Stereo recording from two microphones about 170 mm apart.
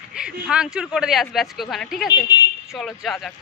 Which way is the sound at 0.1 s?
5° right (ahead or behind).